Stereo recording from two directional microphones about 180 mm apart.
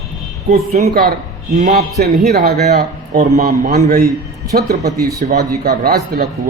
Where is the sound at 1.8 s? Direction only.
60° right (ahead or behind).